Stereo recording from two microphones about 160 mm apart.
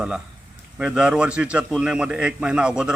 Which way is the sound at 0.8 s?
5° right (ahead or behind).